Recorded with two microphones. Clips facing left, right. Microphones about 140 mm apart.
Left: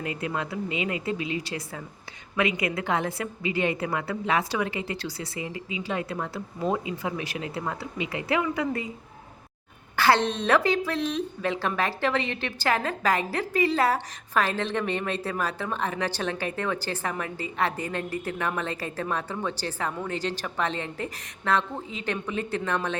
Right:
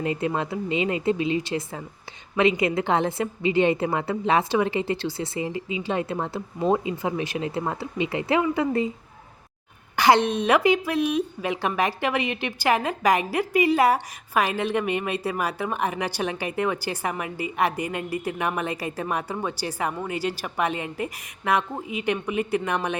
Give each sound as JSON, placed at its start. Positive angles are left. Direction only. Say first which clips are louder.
{"t": 0.0, "sound": "a woman's voice", "louder": "right 5 dB", "side_deg": -30}
{"t": 9.9, "sound": "a woman's voice", "louder": "right 3 dB", "side_deg": -15}